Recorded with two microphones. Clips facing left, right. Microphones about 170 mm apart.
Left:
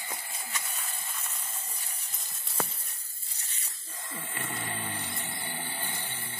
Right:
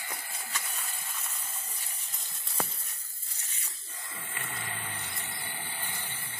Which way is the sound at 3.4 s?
35° left (ahead or behind).